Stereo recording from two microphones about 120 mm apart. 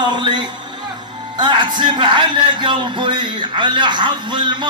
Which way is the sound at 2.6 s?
40° right (ahead or behind).